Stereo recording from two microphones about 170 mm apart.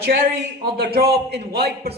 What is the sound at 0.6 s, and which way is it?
A man's voice, 65° right (ahead or behind).